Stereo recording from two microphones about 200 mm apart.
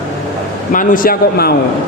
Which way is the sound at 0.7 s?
45° left (ahead or behind).